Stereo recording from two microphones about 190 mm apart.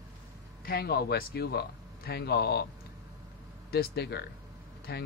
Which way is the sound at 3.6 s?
55° left (ahead or behind).